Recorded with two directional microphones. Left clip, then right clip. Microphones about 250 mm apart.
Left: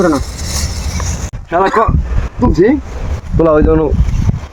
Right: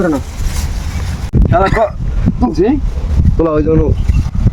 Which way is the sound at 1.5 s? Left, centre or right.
Centre.